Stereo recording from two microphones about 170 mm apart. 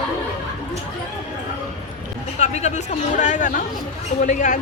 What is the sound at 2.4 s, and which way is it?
A man's voice, 40° left (ahead or behind).